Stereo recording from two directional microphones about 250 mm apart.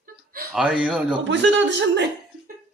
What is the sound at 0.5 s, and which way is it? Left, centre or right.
Speech, centre.